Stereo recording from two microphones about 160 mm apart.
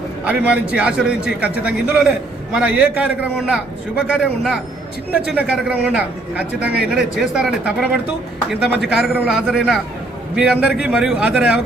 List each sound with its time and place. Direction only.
0.3 s a man's voice: 5° right (ahead or behind)